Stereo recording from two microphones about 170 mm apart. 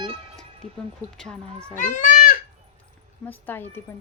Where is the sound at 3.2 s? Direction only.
10° left (ahead or behind).